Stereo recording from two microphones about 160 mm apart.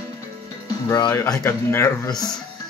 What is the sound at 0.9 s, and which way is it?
Speech, 25° left (ahead or behind).